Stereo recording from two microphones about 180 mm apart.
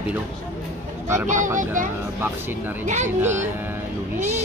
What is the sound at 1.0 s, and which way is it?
Speech, 15° right (ahead or behind).